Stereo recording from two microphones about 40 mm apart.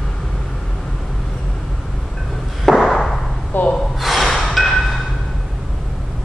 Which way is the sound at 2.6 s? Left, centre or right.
Centre.